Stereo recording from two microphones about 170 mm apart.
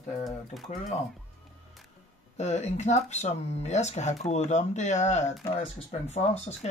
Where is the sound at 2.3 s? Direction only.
40° left (ahead or behind).